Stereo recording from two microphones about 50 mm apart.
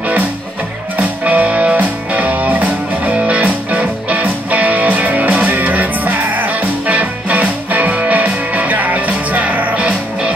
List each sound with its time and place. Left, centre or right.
1.2 s music: right